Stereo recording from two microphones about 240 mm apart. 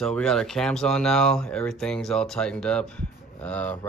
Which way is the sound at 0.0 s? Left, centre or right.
Centre.